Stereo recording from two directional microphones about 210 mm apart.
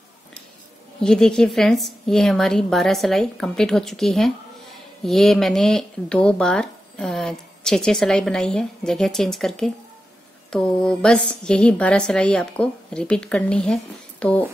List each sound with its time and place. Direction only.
1.0 s speech: 5° left (ahead or behind)